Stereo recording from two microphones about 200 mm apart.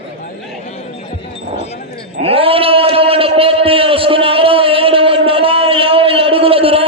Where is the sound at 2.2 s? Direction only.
30° right (ahead or behind).